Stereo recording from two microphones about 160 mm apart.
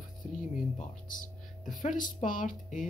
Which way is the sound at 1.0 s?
55° left (ahead or behind).